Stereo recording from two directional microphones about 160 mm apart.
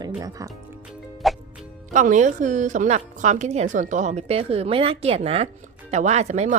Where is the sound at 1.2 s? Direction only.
Centre (ahead or behind).